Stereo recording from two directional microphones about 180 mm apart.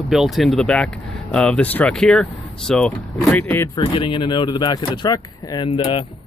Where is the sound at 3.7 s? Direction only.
25° left (ahead or behind).